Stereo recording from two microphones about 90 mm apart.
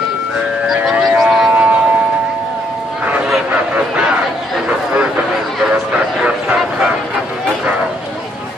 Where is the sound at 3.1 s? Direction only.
15° right (ahead or behind).